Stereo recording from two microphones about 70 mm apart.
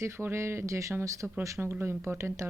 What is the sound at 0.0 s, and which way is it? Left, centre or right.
Speech, right.